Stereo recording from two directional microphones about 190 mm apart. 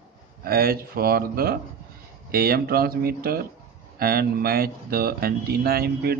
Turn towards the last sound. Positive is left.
turn(degrees=-55)  # may be behind; listen again after turning